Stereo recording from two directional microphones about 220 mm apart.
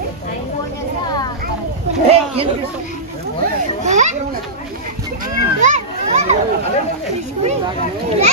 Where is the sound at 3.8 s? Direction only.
35° right (ahead or behind).